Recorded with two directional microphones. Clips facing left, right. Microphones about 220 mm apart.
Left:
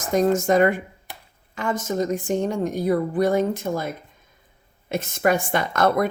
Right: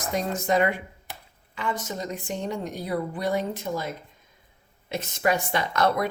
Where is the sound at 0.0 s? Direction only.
45° left (ahead or behind).